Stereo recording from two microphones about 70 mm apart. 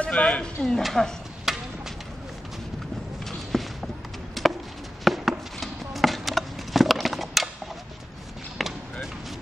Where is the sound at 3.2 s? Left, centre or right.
Centre.